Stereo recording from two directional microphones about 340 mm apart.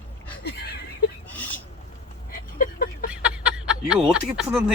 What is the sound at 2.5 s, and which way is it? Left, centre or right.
Vehicle, left.